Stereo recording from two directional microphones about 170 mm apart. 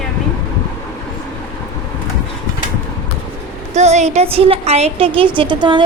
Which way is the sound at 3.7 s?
40° right (ahead or behind).